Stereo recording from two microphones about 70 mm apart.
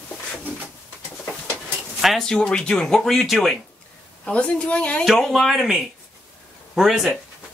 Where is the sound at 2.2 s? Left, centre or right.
Centre.